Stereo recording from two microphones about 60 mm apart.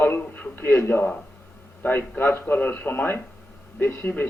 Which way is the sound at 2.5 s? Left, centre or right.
Left.